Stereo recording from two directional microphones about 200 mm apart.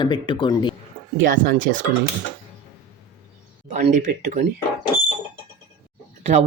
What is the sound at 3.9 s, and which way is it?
Speech, 40° right (ahead or behind).